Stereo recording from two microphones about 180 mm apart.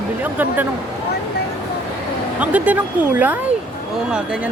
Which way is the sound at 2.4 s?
10° right (ahead or behind).